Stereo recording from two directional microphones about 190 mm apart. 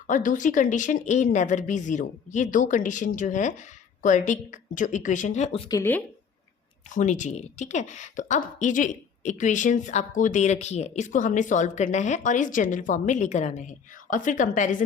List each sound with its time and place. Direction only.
0.1 s a woman's voice: 40° left (ahead or behind)
5.6 s speech: 15° left (ahead or behind)
6.9 s a woman's voice: 40° left (ahead or behind)